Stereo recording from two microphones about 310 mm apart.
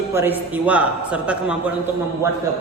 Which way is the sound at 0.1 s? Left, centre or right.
Centre.